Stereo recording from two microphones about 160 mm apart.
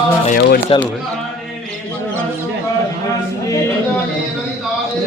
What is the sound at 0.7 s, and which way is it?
Speech, 35° left (ahead or behind).